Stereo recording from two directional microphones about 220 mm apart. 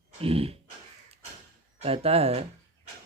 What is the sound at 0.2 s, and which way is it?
Speech, 25° right (ahead or behind).